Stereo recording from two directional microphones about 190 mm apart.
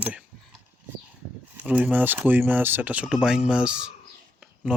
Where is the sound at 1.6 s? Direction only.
5° right (ahead or behind).